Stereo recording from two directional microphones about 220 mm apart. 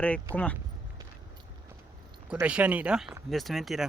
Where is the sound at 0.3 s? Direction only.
10° right (ahead or behind).